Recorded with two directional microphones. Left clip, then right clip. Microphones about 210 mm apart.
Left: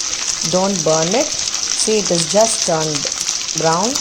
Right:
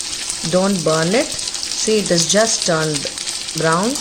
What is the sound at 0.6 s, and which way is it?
Speech, 5° right (ahead or behind).